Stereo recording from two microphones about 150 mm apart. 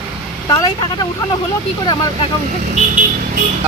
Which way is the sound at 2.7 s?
60° right (ahead or behind).